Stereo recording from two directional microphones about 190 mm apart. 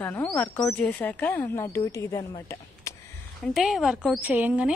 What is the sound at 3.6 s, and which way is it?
A woman's voice, centre (ahead or behind).